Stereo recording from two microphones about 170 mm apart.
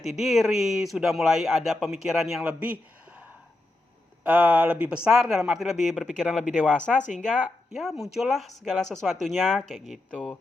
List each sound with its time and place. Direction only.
0.0 s speech: centre (ahead or behind)
4.2 s speech: 10° right (ahead or behind)
7.0 s speech: 45° left (ahead or behind)
7.8 s speech: centre (ahead or behind)